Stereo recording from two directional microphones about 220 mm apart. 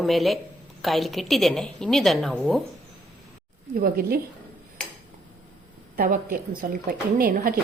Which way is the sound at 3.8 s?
45° right (ahead or behind).